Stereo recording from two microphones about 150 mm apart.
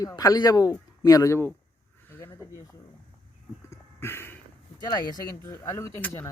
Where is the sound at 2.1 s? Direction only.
15° left (ahead or behind).